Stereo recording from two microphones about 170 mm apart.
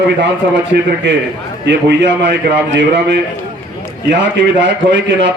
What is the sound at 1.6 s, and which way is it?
A man's voice, 90° right.